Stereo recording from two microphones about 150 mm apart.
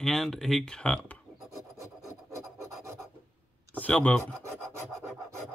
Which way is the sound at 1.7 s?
20° right (ahead or behind).